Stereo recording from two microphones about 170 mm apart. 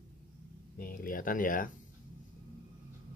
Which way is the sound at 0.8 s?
55° left (ahead or behind).